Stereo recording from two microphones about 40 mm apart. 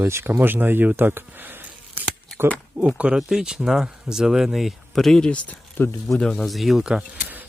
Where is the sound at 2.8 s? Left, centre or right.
Right.